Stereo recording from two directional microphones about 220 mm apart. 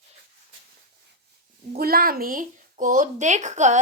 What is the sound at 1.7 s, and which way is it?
A woman's voice, 40° right (ahead or behind).